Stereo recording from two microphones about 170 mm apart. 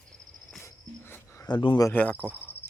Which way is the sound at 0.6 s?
15° left (ahead or behind).